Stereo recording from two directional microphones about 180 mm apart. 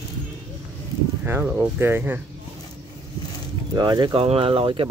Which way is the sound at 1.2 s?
10° right (ahead or behind).